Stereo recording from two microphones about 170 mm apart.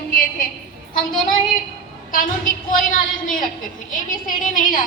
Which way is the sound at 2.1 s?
50° left (ahead or behind).